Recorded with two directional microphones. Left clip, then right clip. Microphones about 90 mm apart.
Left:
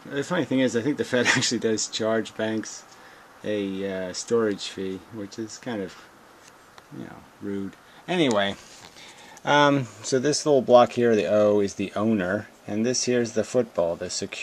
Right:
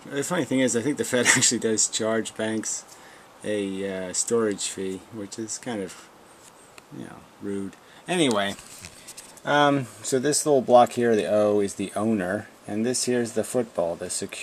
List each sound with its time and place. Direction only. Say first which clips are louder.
0.1 s speech: even; 5° right (ahead or behind)
7.0 s speech: even; 5° right (ahead or behind)
8.3 s speech: left 1 dB; 15° left (ahead or behind)
9.4 s speech: left 1 dB; 30° left (ahead or behind)